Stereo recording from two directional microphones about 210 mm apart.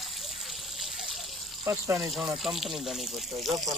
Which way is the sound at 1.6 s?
15° right (ahead or behind).